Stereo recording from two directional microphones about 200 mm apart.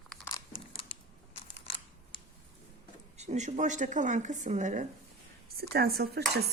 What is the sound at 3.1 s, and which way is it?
Speech, 35° right (ahead or behind).